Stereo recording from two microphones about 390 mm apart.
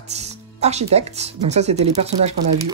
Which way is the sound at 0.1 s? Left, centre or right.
Centre.